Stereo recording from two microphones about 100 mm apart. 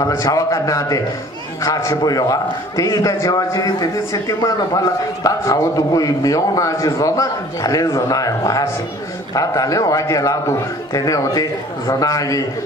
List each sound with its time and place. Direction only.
0.1 s a man's voice: 35° left (ahead or behind)